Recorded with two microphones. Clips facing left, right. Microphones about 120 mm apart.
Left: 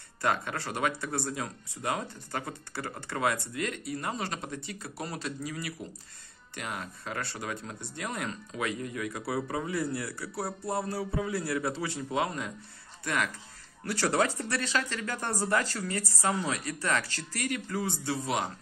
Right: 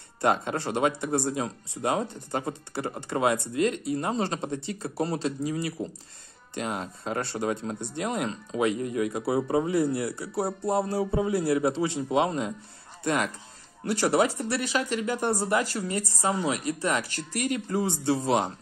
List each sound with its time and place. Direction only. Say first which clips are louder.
0.2 s speech: right 5 dB; 25° right (ahead or behind)